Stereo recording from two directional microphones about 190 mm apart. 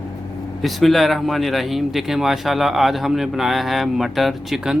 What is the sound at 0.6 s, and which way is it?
Speech, centre (ahead or behind).